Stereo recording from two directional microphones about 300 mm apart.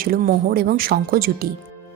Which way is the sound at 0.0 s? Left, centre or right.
Right.